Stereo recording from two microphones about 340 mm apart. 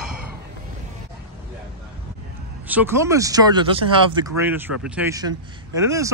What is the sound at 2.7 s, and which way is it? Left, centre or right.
Speech, centre.